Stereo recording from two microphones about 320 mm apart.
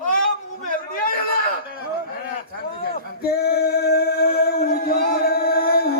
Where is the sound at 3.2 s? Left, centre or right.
Left.